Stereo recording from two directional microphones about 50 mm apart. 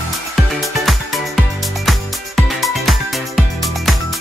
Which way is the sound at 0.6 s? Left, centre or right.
Centre.